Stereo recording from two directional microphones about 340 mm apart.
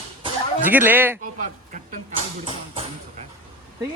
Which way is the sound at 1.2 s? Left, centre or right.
Right.